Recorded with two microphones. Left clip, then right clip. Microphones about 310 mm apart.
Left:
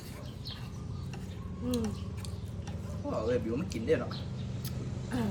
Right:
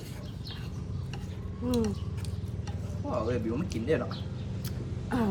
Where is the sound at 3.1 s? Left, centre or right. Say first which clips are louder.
Even; centre.